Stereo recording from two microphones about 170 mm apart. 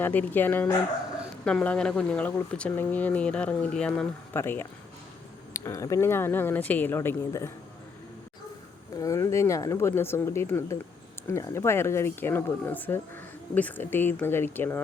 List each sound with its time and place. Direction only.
0.0 s speech: 10° left (ahead or behind)
9.0 s speech: 20° left (ahead or behind)